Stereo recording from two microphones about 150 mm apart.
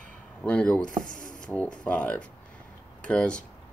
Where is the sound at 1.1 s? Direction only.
60° left (ahead or behind).